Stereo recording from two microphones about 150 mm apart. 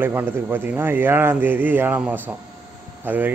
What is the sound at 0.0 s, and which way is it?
Speech, 15° right (ahead or behind).